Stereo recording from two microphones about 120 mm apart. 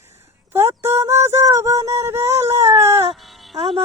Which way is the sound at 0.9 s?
25° right (ahead or behind).